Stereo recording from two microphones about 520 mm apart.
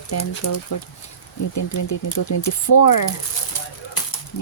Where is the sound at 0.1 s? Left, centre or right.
Left.